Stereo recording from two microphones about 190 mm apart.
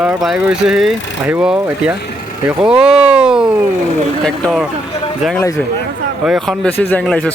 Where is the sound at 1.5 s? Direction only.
10° right (ahead or behind).